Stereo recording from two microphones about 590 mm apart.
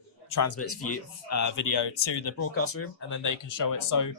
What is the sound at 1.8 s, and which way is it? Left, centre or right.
Speech, left.